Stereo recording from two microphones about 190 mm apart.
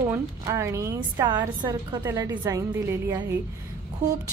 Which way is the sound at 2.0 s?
10° right (ahead or behind).